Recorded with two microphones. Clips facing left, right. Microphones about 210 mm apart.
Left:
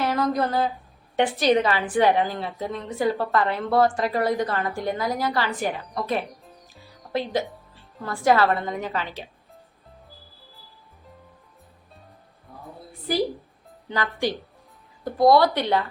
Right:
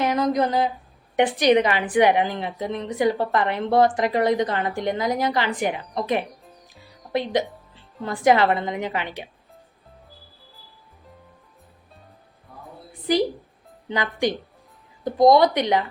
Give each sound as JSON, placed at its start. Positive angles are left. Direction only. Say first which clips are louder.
{"t": 0.0, "sound": "a woman's voice", "louder": "right 2 dB", "side_deg": -15}
{"t": 6.4, "sound": "music", "louder": "even", "side_deg": 0}
{"t": 7.1, "sound": "speech", "louder": "right 2 dB", "side_deg": -20}
{"t": 7.4, "sound": "music", "louder": "even", "side_deg": 0}
{"t": 8.0, "sound": "a woman's voice", "louder": "right 2 dB", "side_deg": -20}
{"t": 13.8, "sound": "a woman's voice", "louder": "right 2 dB", "side_deg": -20}